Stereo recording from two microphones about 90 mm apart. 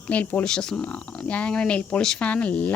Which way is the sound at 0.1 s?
15° left (ahead or behind).